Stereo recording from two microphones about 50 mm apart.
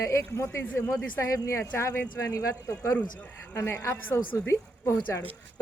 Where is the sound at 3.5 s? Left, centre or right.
Left.